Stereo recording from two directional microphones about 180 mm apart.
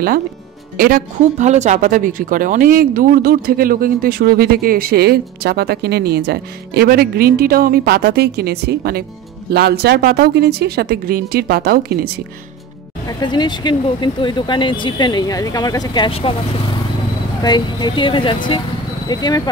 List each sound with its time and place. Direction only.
0.7 s speech: 50° right (ahead or behind)
13.2 s speech: 25° left (ahead or behind)